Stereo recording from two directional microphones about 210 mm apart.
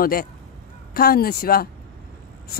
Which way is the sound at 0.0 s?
45° left (ahead or behind).